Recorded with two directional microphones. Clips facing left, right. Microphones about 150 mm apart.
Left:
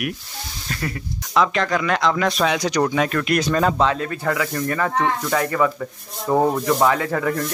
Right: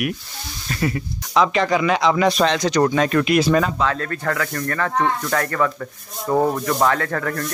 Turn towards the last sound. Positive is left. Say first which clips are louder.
# left 2 dB
turn(degrees=10)  # may be behind; listen again after turning